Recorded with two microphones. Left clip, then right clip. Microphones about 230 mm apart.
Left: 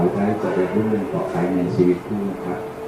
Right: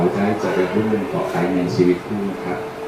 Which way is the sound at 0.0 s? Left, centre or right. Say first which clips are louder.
Right 1 dB; centre.